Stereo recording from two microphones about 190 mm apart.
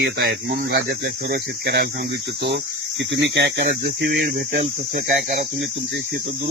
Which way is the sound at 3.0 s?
70° right (ahead or behind).